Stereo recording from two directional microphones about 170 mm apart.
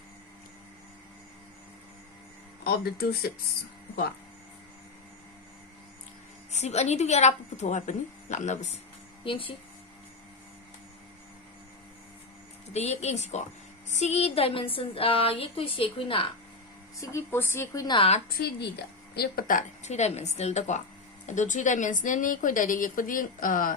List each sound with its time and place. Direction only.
2.6 s speech: 65° left (ahead or behind)
6.5 s a woman's voice: 40° left (ahead or behind)
9.2 s a woman's voice: 30° left (ahead or behind)
12.7 s a woman's voice: 40° left (ahead or behind)
17.0 s a woman's voice: 15° left (ahead or behind)
18.4 s a woman's voice: 65° left (ahead or behind)